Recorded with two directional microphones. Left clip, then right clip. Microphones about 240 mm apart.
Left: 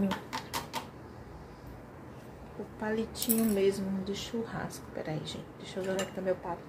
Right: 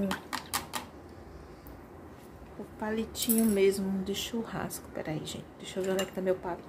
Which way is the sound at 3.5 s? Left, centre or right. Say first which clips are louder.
Right 3 dB; centre.